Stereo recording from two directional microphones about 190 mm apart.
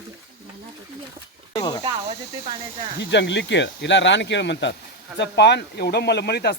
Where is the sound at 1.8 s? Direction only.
30° right (ahead or behind).